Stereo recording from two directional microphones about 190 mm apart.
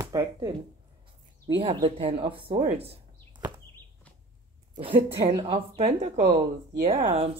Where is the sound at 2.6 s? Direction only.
30° right (ahead or behind).